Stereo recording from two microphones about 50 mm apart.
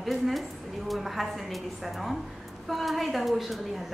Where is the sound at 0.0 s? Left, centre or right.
Centre.